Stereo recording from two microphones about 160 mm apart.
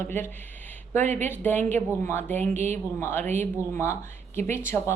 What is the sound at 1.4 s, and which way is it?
A woman's voice, 10° left (ahead or behind).